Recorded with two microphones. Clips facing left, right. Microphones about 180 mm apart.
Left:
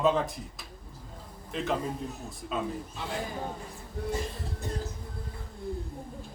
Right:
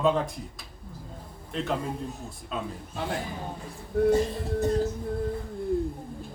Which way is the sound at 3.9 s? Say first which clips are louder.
Right 14 dB; 60° right (ahead or behind).